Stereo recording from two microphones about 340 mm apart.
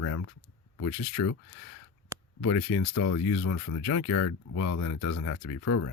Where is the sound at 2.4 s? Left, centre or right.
Left.